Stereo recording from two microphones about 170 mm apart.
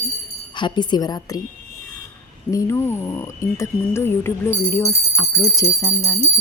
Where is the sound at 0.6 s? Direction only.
25° left (ahead or behind).